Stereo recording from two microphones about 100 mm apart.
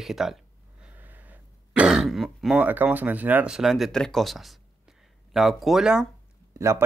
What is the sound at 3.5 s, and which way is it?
Speech, 5° right (ahead or behind).